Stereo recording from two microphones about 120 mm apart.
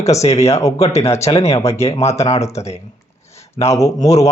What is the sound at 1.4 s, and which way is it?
Speech, 55° left (ahead or behind).